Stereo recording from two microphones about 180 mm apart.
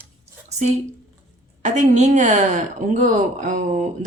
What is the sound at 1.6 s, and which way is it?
Speech, 40° right (ahead or behind).